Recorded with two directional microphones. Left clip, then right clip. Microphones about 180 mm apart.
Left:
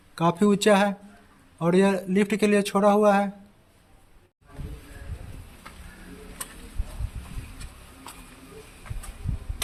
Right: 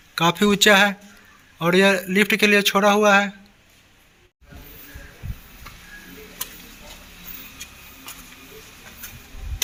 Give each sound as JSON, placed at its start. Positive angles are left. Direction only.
{"t": 0.2, "sound": "a man's voice", "side_deg": 5}